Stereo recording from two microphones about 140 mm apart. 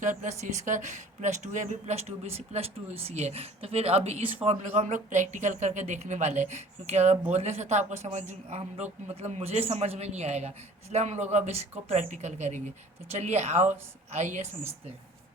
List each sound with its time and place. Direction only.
0.0 s a woman's voice: 65° right (ahead or behind)